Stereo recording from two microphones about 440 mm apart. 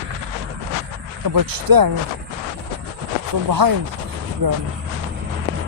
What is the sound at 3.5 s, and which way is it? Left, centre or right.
Speech, right.